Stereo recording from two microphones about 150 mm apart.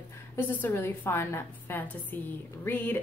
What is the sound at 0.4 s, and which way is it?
A woman's voice, 15° left (ahead or behind).